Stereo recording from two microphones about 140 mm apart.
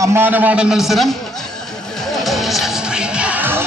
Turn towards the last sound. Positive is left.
turn(degrees=-15)  # may be behind; listen again after turning